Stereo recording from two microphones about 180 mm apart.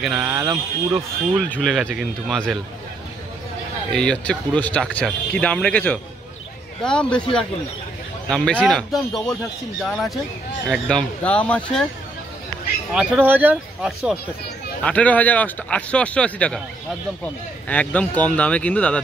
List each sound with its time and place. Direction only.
0.2 s speech: 15° right (ahead or behind)
1.5 s speech: centre (ahead or behind)
3.9 s speech: 5° left (ahead or behind)
8.3 s speech: 5° left (ahead or behind)
12.9 s speech: 5° right (ahead or behind)
14.8 s speech: 5° left (ahead or behind)
17.6 s speech: 10° left (ahead or behind)